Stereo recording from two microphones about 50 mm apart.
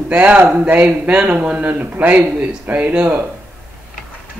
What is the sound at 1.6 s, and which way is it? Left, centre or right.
Speech, right.